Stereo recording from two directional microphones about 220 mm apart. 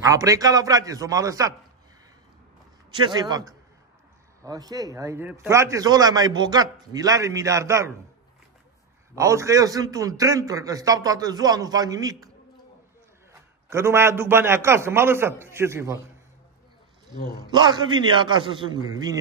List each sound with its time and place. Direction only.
0.0 s a man's voice: 15° right (ahead or behind)
2.9 s a man's voice: 20° right (ahead or behind)
9.1 s a man's voice: 15° right (ahead or behind)
13.3 s a man's voice: 10° right (ahead or behind)
17.5 s a man's voice: 20° right (ahead or behind)